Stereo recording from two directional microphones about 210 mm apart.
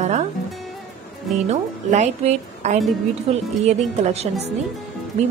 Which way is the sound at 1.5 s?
30° right (ahead or behind).